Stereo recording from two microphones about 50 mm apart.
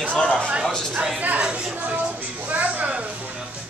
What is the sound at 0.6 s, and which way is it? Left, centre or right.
Speech, centre.